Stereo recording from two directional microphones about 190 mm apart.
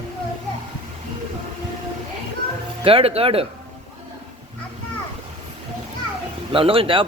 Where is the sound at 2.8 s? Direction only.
30° right (ahead or behind).